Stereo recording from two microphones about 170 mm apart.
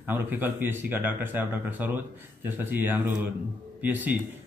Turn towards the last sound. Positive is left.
turn(degrees=-10)  # may be behind; listen again after turning